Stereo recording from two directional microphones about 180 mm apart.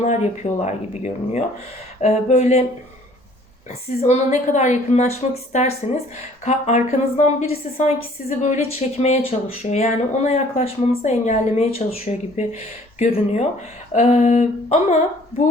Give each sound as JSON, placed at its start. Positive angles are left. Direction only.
{"t": 0.0, "sound": "a woman's voice", "side_deg": 40}
{"t": 3.7, "sound": "a woman's voice", "side_deg": 35}